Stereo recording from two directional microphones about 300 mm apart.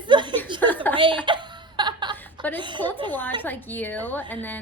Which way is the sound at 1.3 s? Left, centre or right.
Centre.